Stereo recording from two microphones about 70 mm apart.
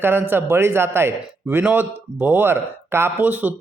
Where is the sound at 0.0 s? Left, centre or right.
Right.